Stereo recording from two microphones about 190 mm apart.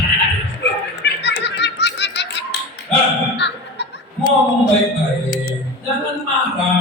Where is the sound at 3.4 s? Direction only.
65° left (ahead or behind).